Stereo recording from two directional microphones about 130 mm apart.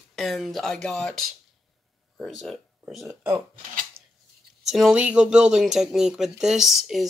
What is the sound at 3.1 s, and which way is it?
Speech, 15° right (ahead or behind).